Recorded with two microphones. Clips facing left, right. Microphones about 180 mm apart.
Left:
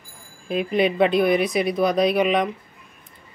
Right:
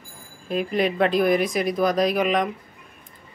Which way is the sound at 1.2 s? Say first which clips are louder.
Left 1 dB; 45° right (ahead or behind).